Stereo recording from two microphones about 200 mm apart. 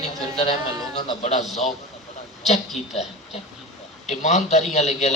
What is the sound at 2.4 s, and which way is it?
Speech, 35° left (ahead or behind).